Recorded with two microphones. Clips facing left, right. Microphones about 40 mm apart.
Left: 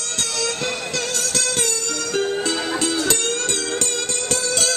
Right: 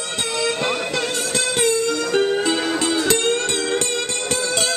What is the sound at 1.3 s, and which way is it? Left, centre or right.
Music, centre.